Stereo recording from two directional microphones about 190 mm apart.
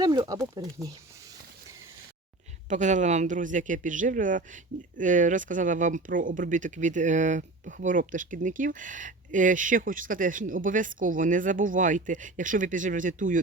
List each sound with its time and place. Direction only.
0.0 s speech: 20° right (ahead or behind)
2.6 s speech: 40° right (ahead or behind)